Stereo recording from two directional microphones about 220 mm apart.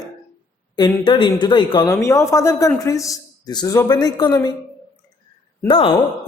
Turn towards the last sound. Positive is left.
turn(degrees=25)  # may be behind; listen again after turning